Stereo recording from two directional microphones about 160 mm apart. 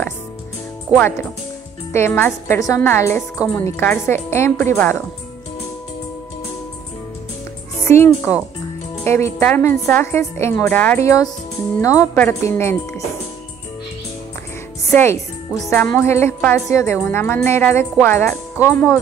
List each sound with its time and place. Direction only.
1.9 s a woman's voice: 15° left (ahead or behind)
7.8 s a woman's voice: 15° left (ahead or behind)
14.9 s a woman's voice: 15° left (ahead or behind)